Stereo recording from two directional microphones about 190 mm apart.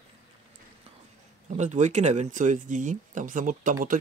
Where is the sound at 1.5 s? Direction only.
40° right (ahead or behind).